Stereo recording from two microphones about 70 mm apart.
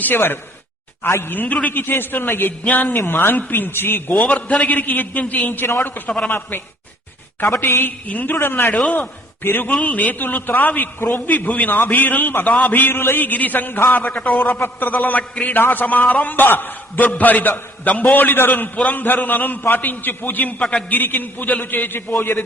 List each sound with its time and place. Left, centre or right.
0.0 s speech: left
1.3 s a man's voice: left
6.1 s a man's voice: centre
7.6 s a man's voice: left
14.3 s a man's voice: centre
14.5 s a man's voice: left
20.9 s a man's voice: left